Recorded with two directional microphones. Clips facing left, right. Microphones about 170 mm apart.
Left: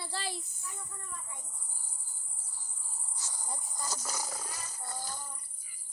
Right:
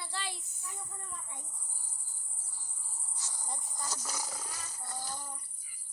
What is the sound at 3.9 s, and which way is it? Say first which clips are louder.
Speech: left 2 dB; 45° left (ahead or behind).